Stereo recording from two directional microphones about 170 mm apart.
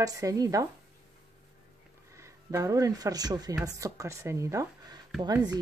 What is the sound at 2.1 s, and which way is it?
Speech, 15° right (ahead or behind).